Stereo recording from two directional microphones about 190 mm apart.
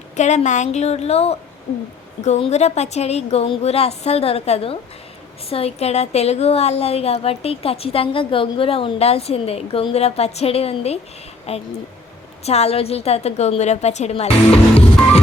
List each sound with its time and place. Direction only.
0.2 s a woman's voice: 40° left (ahead or behind)